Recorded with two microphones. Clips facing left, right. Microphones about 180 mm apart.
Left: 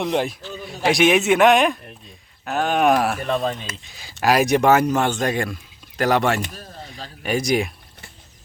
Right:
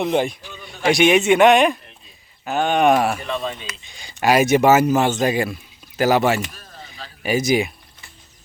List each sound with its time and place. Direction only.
0.0 s a man's voice: centre (ahead or behind)
3.2 s speech: 45° left (ahead or behind)
3.8 s a man's voice: centre (ahead or behind)
6.4 s speech: 40° left (ahead or behind)
7.2 s a man's voice: 5° right (ahead or behind)